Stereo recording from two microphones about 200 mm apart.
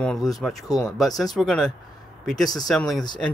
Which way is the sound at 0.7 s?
15° left (ahead or behind).